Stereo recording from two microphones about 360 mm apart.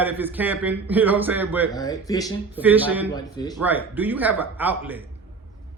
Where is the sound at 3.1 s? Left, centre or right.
Centre.